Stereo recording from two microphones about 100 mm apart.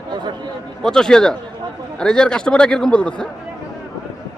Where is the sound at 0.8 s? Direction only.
5° left (ahead or behind).